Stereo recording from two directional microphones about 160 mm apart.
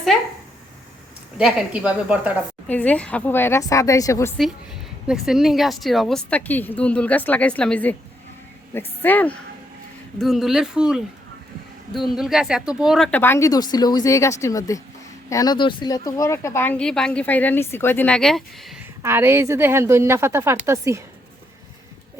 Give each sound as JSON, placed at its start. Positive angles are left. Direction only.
{"t": 1.4, "sound": "a woman's voice", "side_deg": -5}
{"t": 2.6, "sound": "a woman's voice", "side_deg": 10}
{"t": 4.4, "sound": "a woman's voice", "side_deg": 0}
{"t": 9.0, "sound": "a woman's voice", "side_deg": 10}
{"t": 10.2, "sound": "speech", "side_deg": 0}
{"t": 12.1, "sound": "speech", "side_deg": -5}
{"t": 13.1, "sound": "a woman's voice", "side_deg": 10}
{"t": 19.0, "sound": "a woman's voice", "side_deg": -15}